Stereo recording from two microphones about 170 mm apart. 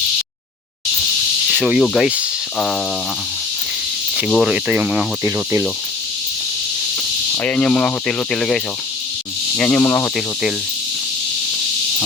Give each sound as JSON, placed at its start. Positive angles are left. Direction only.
{"t": 1.5, "sound": "speech", "side_deg": -5}
{"t": 4.2, "sound": "speech", "side_deg": -5}
{"t": 7.4, "sound": "speech", "side_deg": 5}